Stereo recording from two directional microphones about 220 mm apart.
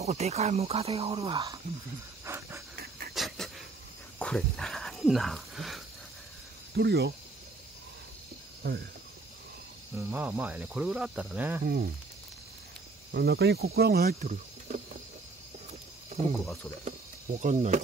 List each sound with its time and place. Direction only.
0.0 s speech: 30° right (ahead or behind)
2.2 s pant: 10° right (ahead or behind)
2.7 s pant: 40° right (ahead or behind)
3.2 s a sound: centre (ahead or behind)
4.2 s speech: centre (ahead or behind)
6.7 s speech: 50° right (ahead or behind)
9.9 s speech: 10° right (ahead or behind)
11.6 s speech: 45° right (ahead or behind)
13.1 s speech: 45° right (ahead or behind)
16.8 s speech: 35° right (ahead or behind)